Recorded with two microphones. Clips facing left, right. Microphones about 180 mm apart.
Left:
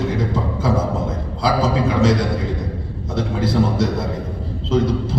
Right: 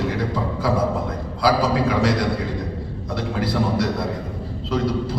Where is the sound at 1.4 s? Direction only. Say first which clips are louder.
Even; 25° left (ahead or behind).